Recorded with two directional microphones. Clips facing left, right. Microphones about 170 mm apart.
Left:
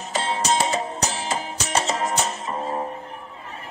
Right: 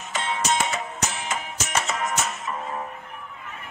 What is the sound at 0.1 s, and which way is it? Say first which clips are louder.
Music: left 3 dB; 35° left (ahead or behind).